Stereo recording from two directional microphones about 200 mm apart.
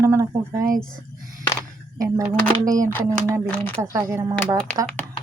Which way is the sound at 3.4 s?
5° left (ahead or behind).